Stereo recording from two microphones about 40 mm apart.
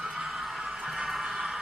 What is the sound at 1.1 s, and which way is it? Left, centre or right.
Music, centre.